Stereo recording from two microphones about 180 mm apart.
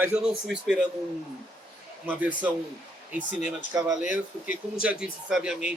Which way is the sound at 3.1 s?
10° right (ahead or behind).